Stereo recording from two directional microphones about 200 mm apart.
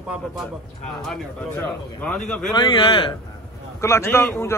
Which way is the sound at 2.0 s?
5° left (ahead or behind).